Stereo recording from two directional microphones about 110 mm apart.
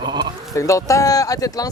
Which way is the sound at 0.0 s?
40° right (ahead or behind).